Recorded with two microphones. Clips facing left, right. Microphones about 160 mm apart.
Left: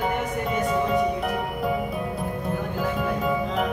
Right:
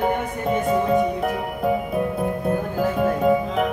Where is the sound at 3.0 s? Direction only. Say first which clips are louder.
Right 8 dB; 50° right (ahead or behind).